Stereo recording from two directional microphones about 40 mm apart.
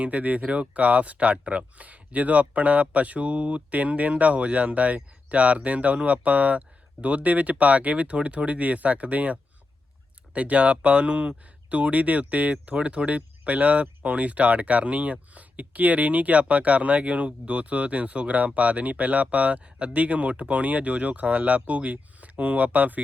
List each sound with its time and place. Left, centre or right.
0.0 s speech: right